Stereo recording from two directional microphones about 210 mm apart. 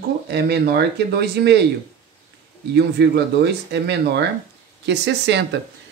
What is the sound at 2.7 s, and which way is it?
Speech, 55° right (ahead or behind).